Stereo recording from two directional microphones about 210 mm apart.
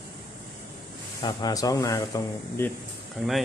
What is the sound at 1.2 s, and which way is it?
Speech, 20° left (ahead or behind).